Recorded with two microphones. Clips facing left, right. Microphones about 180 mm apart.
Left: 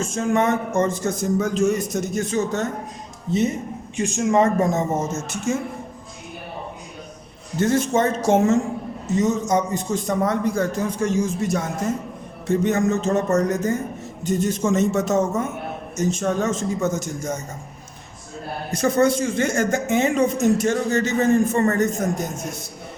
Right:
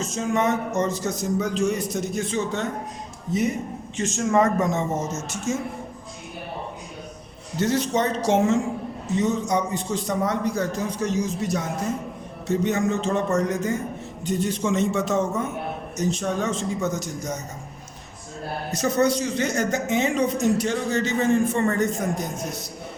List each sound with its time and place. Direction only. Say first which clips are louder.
0.0 s a woman's voice: left 3 dB; 50° left (ahead or behind)
3.3 s speech: left 3 dB; 30° left (ahead or behind)
3.9 s speech: left 2 dB; 15° left (ahead or behind)
5.5 s speech: left 3 dB; 60° left (ahead or behind)
7.6 s a woman's voice: left 3 dB; 50° left (ahead or behind)
18.8 s a woman's voice: left 3 dB; 50° left (ahead or behind)